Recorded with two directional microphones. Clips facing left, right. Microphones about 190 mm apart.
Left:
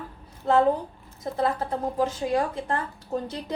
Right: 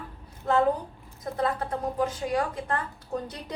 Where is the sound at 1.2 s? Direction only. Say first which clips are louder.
Left 2 dB; 25° left (ahead or behind).